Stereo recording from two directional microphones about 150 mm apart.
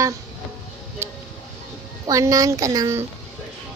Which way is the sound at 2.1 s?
20° right (ahead or behind).